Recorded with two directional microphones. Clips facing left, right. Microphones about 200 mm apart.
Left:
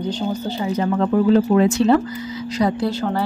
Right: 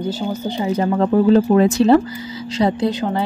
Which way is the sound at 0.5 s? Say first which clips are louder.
Right 3 dB; 25° right (ahead or behind).